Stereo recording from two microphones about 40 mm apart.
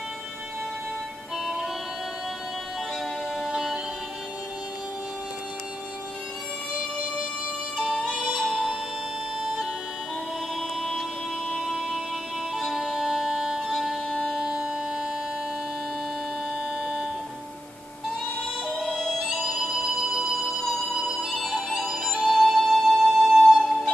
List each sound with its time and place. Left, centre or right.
1.4 s music: centre
3.4 s music: centre
7.8 s music: centre
10.8 s music: centre
11.6 s a sound: centre
12.5 s music: centre
14.5 s a sound: right
16.8 s music: centre
18.9 s emergency vehicle: centre
21.1 s music: centre
21.6 s music: centre